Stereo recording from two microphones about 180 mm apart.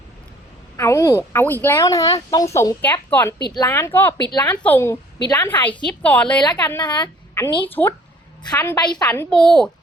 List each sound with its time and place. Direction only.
0.8 s speech: 15° left (ahead or behind)
4.2 s a woman's voice: 25° left (ahead or behind)
4.4 s speech: 10° left (ahead or behind)
6.4 s a woman's voice: 25° left (ahead or behind)
7.6 s speech: 10° left (ahead or behind)
8.8 s a woman's voice: 25° left (ahead or behind)
9.0 s a woman's voice: 5° left (ahead or behind)